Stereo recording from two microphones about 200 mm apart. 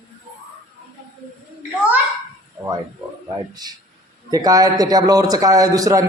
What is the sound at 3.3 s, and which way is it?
A man's voice, 20° right (ahead or behind).